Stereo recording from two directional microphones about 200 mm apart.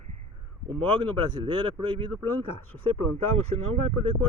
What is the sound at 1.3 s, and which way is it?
Speech, 25° right (ahead or behind).